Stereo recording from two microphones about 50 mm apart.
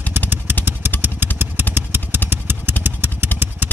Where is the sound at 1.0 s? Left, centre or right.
Right.